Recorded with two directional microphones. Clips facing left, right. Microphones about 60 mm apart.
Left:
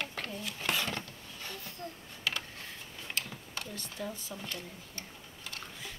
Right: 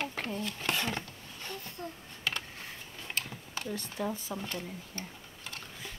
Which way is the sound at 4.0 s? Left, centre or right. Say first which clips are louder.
Right 5 dB; right.